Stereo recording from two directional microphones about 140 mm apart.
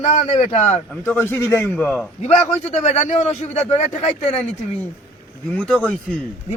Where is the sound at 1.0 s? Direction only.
15° left (ahead or behind).